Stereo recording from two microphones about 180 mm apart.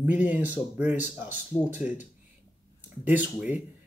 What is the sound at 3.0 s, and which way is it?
Speech, 5° right (ahead or behind).